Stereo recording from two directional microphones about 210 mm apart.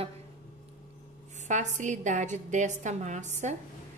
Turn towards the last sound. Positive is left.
turn(degrees=-35)  # may be behind; listen again after turning